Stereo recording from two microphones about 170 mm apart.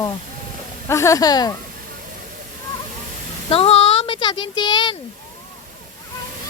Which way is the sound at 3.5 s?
35° left (ahead or behind).